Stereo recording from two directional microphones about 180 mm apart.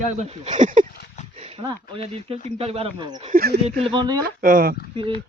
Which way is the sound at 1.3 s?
35° right (ahead or behind).